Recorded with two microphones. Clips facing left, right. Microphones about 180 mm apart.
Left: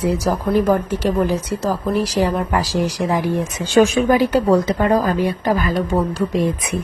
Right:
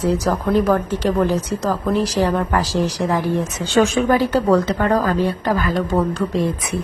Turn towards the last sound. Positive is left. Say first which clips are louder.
# left 1 dB
turn(degrees=15)  # may be behind; listen again after turning